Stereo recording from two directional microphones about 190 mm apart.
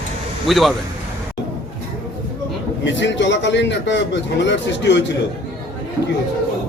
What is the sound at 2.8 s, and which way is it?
A man's voice, 70° left (ahead or behind).